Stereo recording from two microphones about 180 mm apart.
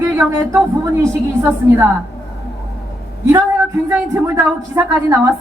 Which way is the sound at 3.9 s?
15° right (ahead or behind).